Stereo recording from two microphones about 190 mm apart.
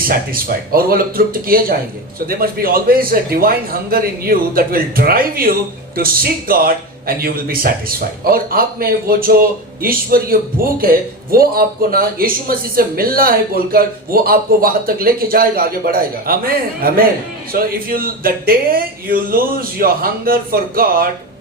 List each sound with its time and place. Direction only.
0.0 s speech: 50° right (ahead or behind)